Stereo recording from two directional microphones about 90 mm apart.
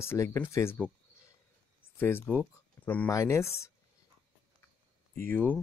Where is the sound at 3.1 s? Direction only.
35° left (ahead or behind).